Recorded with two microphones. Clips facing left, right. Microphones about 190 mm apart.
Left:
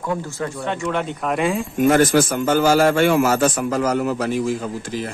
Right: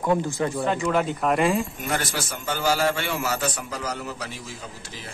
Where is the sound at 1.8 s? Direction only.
50° left (ahead or behind).